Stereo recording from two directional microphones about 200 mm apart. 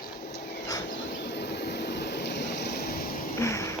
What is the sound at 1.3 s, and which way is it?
Vehicle, 55° left (ahead or behind).